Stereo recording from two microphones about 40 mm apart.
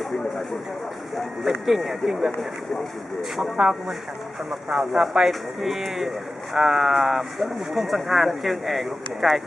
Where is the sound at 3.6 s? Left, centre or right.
Right.